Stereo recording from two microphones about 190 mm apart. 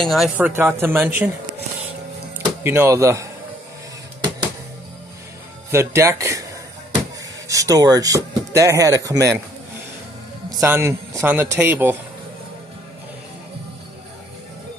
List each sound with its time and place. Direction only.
0.0 s speech: centre (ahead or behind)
0.5 s speech: 15° right (ahead or behind)
2.6 s speech: 15° right (ahead or behind)
5.7 s speech: 15° right (ahead or behind)
7.4 s speech: 15° right (ahead or behind)
10.6 s speech: 15° right (ahead or behind)